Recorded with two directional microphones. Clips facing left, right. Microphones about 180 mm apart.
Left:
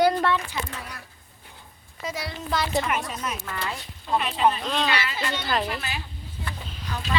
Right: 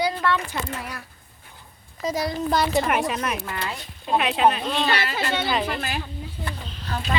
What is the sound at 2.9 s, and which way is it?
Speech, 75° right (ahead or behind).